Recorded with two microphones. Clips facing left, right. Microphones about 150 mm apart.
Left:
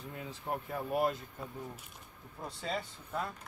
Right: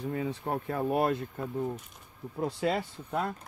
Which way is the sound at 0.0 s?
85° right.